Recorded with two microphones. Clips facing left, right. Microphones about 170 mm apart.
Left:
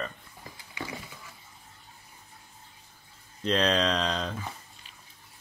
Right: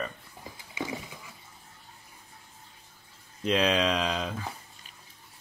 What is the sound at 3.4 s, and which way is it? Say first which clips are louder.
Speech: even; 5° right (ahead or behind).